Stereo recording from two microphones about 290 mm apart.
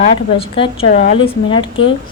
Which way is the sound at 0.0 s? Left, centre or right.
Centre.